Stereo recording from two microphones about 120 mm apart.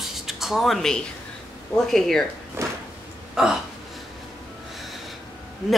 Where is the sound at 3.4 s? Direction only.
5° right (ahead or behind).